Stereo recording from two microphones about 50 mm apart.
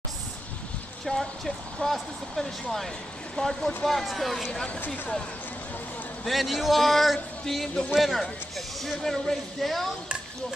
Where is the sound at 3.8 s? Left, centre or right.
Centre.